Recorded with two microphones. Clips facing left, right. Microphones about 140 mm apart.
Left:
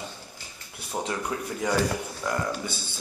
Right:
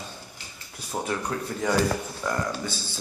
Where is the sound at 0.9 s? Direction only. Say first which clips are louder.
Right 1 dB; 10° left (ahead or behind).